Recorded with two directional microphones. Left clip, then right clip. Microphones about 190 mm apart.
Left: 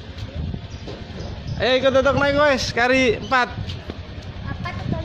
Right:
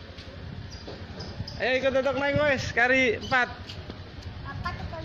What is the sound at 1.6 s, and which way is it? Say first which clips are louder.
A man's voice: left 7 dB; 25° left (ahead or behind).